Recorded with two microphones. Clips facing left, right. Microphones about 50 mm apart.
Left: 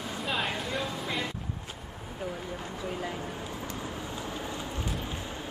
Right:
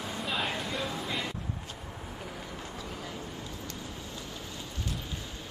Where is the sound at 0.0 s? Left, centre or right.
Centre.